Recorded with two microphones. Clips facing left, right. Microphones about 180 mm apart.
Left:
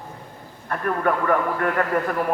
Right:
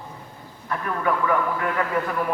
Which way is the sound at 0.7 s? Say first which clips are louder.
Left 2 dB; 50° left (ahead or behind).